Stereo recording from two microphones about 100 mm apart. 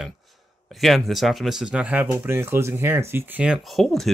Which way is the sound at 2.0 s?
25° right (ahead or behind).